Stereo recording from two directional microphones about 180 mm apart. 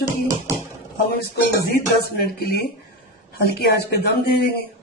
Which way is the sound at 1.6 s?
60° left (ahead or behind).